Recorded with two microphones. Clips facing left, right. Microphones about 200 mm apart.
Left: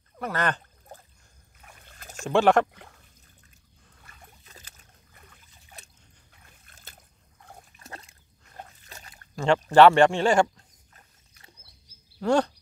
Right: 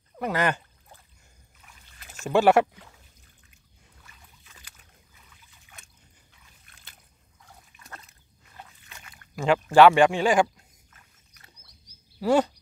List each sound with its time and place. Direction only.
0.2 s speech: 10° right (ahead or behind)
1.6 s splash: 55° left (ahead or behind)
2.2 s speech: 5° right (ahead or behind)
4.0 s boat: 55° left (ahead or behind)
4.5 s boat: 40° left (ahead or behind)
5.1 s trickle: 55° left (ahead or behind)
5.5 s trickle: 35° left (ahead or behind)
6.3 s boat: 50° left (ahead or behind)
7.3 s dog: 55° left (ahead or behind)
7.8 s dog: 30° left (ahead or behind)
8.5 s a sound: 40° left (ahead or behind)
9.3 s speech: 10° right (ahead or behind)
10.9 s a sound: 30° left (ahead or behind)
12.2 s speech: 5° right (ahead or behind)